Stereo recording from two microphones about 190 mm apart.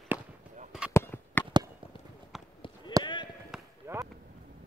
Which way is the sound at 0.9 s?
10° left (ahead or behind).